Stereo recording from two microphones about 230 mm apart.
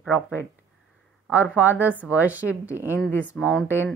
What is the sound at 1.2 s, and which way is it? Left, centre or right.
A woman's voice, centre.